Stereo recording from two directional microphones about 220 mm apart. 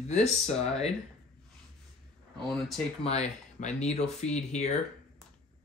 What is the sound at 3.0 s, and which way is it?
Speech, 30° left (ahead or behind).